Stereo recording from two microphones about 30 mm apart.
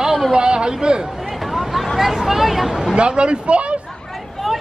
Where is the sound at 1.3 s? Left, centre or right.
Centre.